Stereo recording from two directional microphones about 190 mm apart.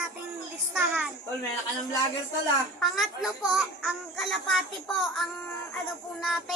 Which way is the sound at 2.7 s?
Centre (ahead or behind).